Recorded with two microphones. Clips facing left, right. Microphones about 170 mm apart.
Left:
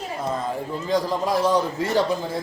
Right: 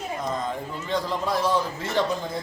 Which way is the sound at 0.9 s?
40° left (ahead or behind).